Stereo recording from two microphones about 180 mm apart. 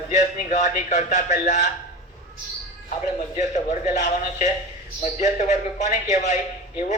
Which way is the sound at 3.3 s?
40° left (ahead or behind).